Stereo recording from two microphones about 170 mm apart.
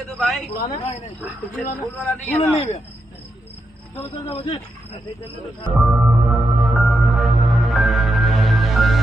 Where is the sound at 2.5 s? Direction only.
40° left (ahead or behind).